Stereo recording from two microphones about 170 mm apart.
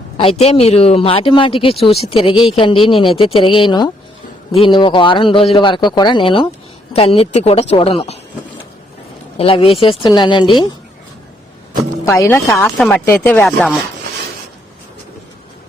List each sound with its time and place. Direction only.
0.2 s a man's voice: 35° left (ahead or behind)
9.4 s a man's voice: 35° left (ahead or behind)
12.0 s speech: 15° left (ahead or behind)
12.7 s speech: 5° left (ahead or behind)